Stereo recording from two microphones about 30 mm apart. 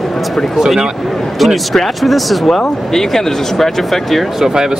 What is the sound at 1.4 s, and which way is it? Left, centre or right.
Speech, centre.